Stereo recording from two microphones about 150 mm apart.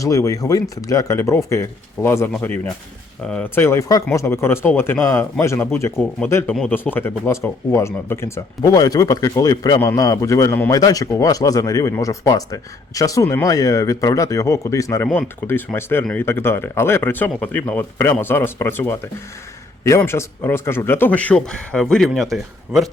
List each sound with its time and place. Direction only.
0.0 s a man's voice: 20° left (ahead or behind); by 22.9 s centre (ahead or behind)